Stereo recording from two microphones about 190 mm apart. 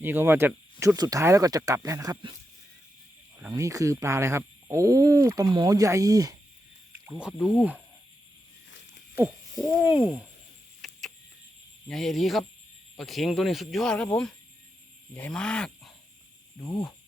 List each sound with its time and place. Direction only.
0.0 s speech: 10° right (ahead or behind)
3.5 s speech: 15° right (ahead or behind)
7.1 s speech: 5° right (ahead or behind)
9.6 s speech: 10° right (ahead or behind)
10.8 s a sound: centre (ahead or behind)
11.9 s speech: centre (ahead or behind)
16.6 s speech: 15° left (ahead or behind)